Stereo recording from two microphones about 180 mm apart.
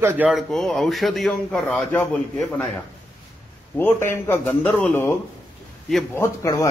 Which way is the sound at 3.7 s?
10° left (ahead or behind).